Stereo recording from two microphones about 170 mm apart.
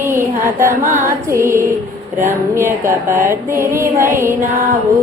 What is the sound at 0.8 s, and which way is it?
Music, 50° right (ahead or behind).